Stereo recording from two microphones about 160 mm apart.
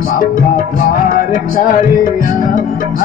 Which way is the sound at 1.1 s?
55° left (ahead or behind).